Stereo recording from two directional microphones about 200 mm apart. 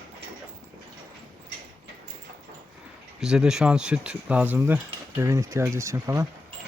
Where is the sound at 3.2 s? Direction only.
5° right (ahead or behind).